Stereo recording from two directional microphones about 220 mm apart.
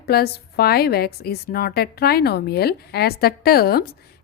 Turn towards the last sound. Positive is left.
turn(degrees=45)  # may be behind; listen again after turning